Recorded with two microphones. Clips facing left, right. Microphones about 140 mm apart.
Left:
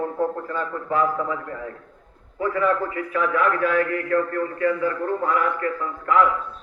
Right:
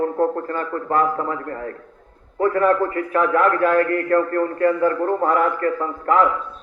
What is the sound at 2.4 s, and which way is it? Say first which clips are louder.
A man's voice: right 5 dB; 55° right (ahead or behind).